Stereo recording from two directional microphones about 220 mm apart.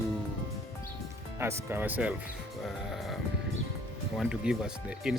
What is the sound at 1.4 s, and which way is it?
Speech, 10° right (ahead or behind).